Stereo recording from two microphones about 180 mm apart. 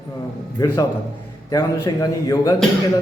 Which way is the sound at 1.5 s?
20° left (ahead or behind).